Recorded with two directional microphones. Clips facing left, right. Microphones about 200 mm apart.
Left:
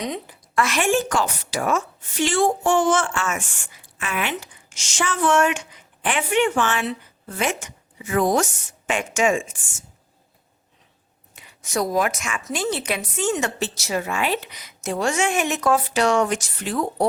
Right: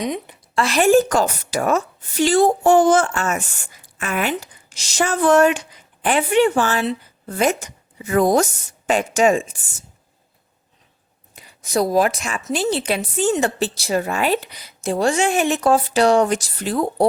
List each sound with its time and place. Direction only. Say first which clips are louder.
0.0 s a woman's voice: right 4 dB; 15° right (ahead or behind)
0.5 s a woman's voice: right 6 dB; 35° right (ahead or behind)
11.3 s a woman's voice: right 4 dB; 35° right (ahead or behind)